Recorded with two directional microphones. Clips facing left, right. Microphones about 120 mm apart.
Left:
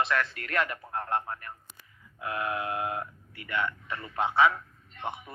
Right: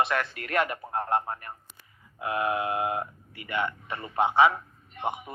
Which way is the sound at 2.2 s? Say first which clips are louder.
Right 4 dB; 20° right (ahead or behind).